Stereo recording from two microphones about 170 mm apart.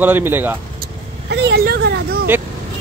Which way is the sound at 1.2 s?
90° right.